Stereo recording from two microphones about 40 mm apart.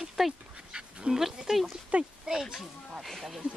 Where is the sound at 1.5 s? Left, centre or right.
Centre.